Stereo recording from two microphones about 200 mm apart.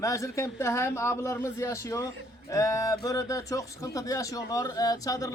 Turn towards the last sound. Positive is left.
turn(degrees=15)  # may be behind; listen again after turning